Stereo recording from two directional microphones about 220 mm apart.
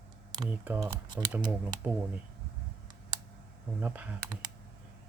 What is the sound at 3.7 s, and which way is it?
Speech, 5° right (ahead or behind).